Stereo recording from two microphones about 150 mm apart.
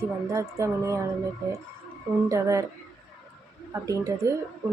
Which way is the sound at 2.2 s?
20° right (ahead or behind).